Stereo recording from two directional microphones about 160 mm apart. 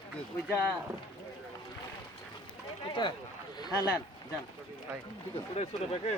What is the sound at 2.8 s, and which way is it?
Speech, 30° left (ahead or behind).